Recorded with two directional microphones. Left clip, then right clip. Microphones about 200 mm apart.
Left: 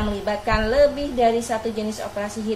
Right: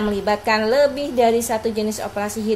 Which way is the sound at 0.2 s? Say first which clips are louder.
Right 4 dB; 45° right (ahead or behind).